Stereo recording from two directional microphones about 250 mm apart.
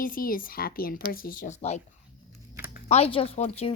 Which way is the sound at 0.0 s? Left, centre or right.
Left.